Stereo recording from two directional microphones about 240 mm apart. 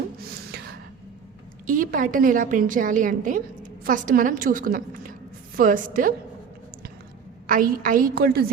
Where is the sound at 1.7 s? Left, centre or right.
Right.